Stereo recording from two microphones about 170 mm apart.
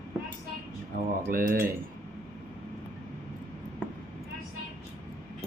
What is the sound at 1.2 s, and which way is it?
Speech, 60° right (ahead or behind).